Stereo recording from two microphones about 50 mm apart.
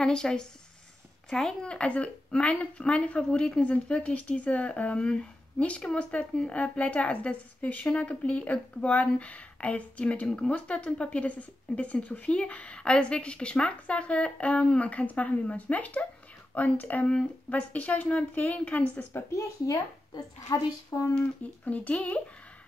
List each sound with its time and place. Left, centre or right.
0.0 s speech: centre
19.3 s a woman's voice: left
21.6 s speech: left